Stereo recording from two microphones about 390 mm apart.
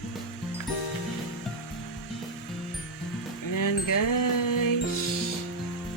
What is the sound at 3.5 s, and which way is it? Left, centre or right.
Wind chime, left.